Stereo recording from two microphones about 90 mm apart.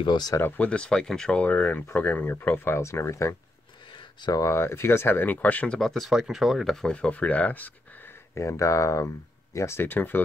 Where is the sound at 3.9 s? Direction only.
60° left (ahead or behind).